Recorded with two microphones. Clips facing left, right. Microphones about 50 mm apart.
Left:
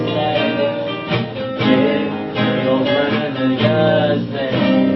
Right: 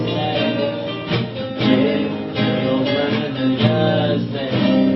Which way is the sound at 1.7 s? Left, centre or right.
Centre.